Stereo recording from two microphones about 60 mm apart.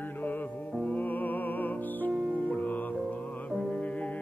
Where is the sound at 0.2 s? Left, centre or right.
Left.